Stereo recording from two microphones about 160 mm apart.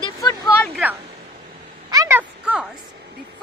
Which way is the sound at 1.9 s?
20° right (ahead or behind).